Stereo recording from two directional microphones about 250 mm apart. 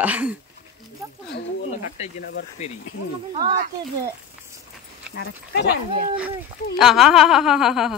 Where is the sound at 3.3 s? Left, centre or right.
Right.